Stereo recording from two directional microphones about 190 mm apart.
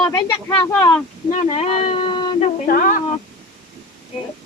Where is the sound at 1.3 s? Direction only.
30° left (ahead or behind).